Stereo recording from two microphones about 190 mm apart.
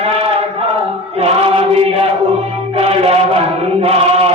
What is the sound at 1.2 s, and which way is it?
Choir, 30° right (ahead or behind).